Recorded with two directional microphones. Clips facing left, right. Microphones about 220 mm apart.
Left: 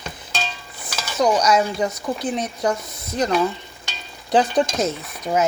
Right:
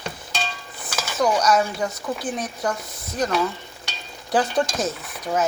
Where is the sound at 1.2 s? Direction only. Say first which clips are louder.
Left 2 dB; 20° left (ahead or behind).